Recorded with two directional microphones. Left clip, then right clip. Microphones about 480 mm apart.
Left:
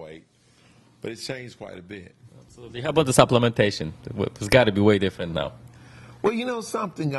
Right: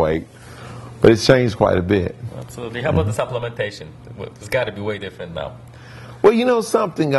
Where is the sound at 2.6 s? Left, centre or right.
Left.